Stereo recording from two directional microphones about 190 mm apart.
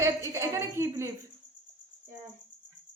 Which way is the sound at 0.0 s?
15° right (ahead or behind).